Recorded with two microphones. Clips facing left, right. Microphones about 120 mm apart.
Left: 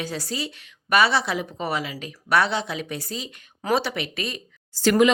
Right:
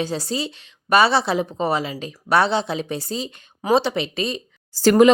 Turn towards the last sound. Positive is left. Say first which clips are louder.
# right 4 dB
turn(degrees=-35)  # may be behind; listen again after turning